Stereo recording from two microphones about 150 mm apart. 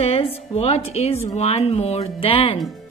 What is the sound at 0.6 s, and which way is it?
A woman's voice, 40° left (ahead or behind).